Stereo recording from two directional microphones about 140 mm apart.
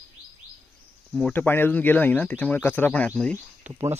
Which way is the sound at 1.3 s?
15° left (ahead or behind).